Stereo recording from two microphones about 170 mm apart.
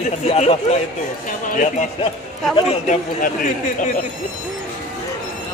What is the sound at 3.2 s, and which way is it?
Speech, 50° left (ahead or behind).